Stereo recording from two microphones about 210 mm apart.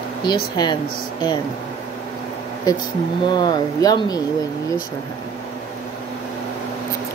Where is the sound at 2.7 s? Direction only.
20° left (ahead or behind).